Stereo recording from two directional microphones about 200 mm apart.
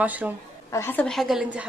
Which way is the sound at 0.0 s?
10° right (ahead or behind).